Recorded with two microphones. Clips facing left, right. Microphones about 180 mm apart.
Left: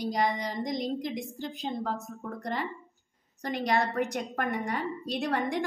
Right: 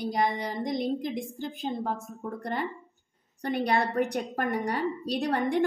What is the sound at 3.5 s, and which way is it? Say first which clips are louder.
A woman's voice: right 2 dB; 30° right (ahead or behind).